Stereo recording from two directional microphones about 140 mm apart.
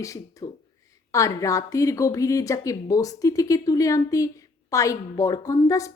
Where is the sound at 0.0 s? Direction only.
25° left (ahead or behind).